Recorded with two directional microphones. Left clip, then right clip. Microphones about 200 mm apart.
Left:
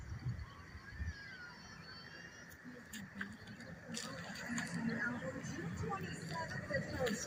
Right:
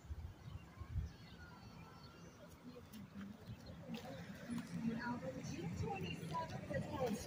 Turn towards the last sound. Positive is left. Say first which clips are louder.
# left 4 dB
turn(degrees=10)  # may be behind; listen again after turning